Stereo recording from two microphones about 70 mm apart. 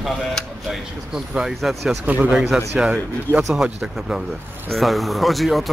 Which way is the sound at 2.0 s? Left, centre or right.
Right.